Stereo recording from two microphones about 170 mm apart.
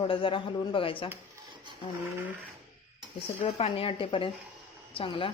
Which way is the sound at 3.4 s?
35° left (ahead or behind).